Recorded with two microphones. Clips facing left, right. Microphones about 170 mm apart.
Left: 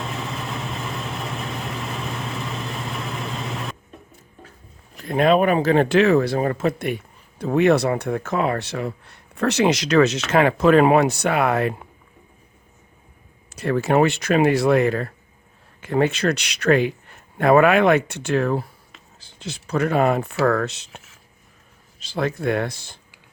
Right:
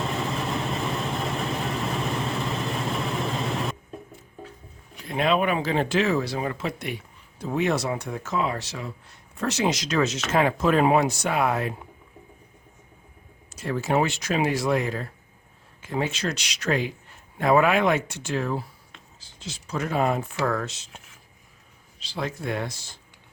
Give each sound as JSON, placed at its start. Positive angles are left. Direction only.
{"t": 0.0, "sound": "vehicle", "side_deg": 0}
{"t": 5.0, "sound": "speech", "side_deg": 50}
{"t": 13.6, "sound": "speech", "side_deg": 65}
{"t": 22.0, "sound": "speech", "side_deg": 55}